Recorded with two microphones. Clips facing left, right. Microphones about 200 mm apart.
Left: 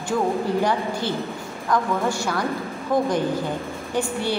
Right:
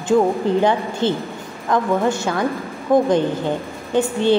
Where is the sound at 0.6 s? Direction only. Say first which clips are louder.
Right 5 dB; 20° right (ahead or behind).